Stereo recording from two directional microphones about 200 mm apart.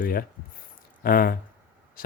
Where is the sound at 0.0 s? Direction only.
45° left (ahead or behind).